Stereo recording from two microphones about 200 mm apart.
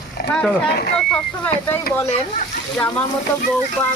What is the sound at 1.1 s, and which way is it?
Speech, 5° left (ahead or behind).